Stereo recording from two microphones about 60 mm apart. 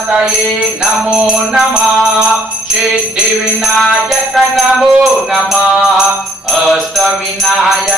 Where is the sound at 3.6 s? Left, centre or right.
Centre.